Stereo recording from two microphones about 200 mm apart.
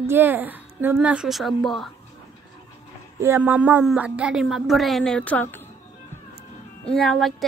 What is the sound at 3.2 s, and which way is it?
A woman's voice, 10° right (ahead or behind).